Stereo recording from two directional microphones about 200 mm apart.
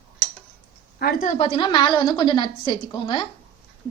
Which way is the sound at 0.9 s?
45° left (ahead or behind).